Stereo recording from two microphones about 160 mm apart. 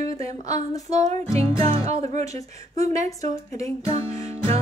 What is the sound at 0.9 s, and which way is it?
Music, 45° right (ahead or behind).